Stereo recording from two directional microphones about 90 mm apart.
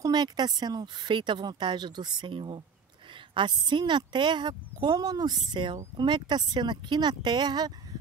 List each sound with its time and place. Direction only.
0.0 s speech: 50° right (ahead or behind)
5.5 s speech: 60° right (ahead or behind)